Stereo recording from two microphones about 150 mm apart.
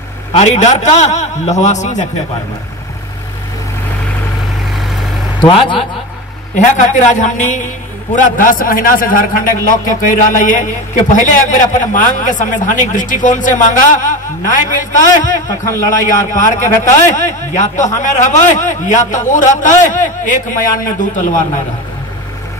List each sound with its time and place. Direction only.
0.3 s a man's voice: 50° left (ahead or behind)
5.4 s a man's voice: 35° left (ahead or behind)
6.5 s a man's voice: 55° left (ahead or behind)
15.4 s a man's voice: 20° left (ahead or behind)
16.3 s a man's voice: 60° left (ahead or behind)